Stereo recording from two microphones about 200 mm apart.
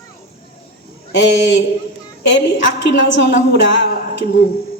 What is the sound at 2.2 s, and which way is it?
A woman's voice, 60° left (ahead or behind).